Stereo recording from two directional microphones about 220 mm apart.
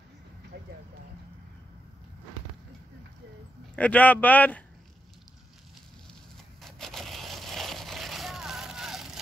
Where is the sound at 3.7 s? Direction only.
5° left (ahead or behind).